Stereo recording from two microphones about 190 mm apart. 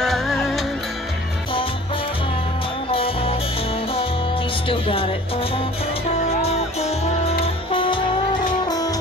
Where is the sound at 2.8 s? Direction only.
30° left (ahead or behind).